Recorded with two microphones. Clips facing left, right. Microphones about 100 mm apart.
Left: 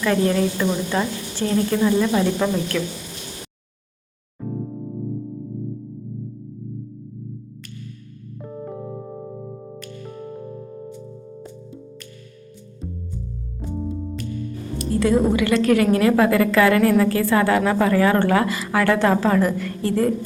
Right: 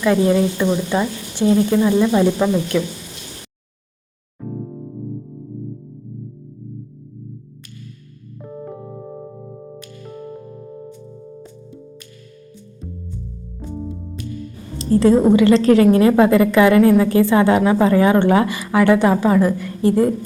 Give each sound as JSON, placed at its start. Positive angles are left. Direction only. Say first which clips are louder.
{"t": 0.0, "sound": "speech", "louder": "right 4 dB", "side_deg": -15}
{"t": 4.4, "sound": "music", "louder": "even", "side_deg": 0}
{"t": 8.6, "sound": "music", "louder": "left 2 dB", "side_deg": 0}
{"t": 12.8, "sound": "music", "louder": "left 1 dB", "side_deg": 5}
{"t": 14.8, "sound": "a woman's voice", "louder": "right 5 dB", "side_deg": -30}